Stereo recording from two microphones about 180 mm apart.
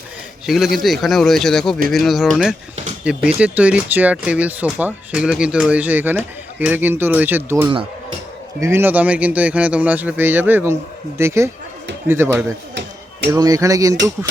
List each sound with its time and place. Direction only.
0.4 s speech: centre (ahead or behind); by 13.9 s 20° right (ahead or behind)